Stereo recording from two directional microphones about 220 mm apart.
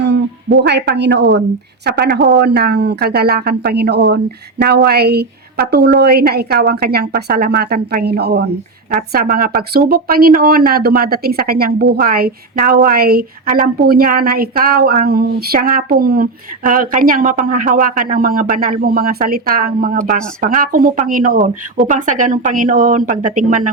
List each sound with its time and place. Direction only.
0.6 s speech: 50° right (ahead or behind)